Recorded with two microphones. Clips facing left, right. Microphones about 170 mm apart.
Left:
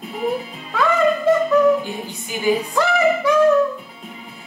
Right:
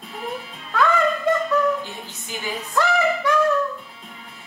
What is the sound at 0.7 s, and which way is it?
Music, centre (ahead or behind).